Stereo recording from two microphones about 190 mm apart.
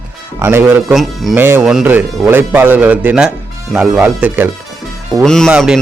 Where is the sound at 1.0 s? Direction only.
Centre (ahead or behind).